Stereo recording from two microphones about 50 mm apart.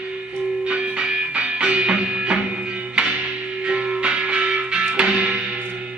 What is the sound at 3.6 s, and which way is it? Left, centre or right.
Music, right.